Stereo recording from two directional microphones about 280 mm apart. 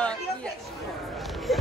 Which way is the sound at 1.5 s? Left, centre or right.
Centre.